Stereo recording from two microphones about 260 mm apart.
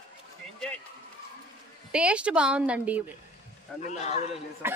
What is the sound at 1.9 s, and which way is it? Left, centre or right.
Speech, centre.